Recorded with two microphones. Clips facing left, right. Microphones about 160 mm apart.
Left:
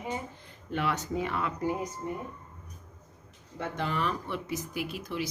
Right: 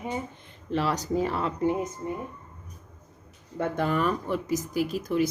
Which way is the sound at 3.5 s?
50° right (ahead or behind).